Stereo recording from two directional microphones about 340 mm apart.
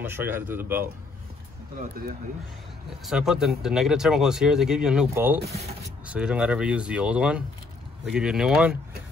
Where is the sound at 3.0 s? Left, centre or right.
Centre.